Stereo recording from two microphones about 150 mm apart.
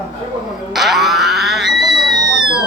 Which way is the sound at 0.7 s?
Centre (ahead or behind).